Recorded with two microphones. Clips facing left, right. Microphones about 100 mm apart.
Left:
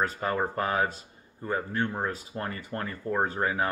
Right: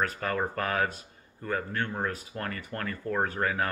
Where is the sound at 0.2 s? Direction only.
20° left (ahead or behind).